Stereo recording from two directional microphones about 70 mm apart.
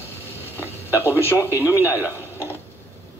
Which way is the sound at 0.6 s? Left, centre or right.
Left.